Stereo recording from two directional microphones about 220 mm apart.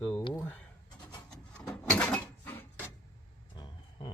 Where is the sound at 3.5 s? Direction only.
20° left (ahead or behind).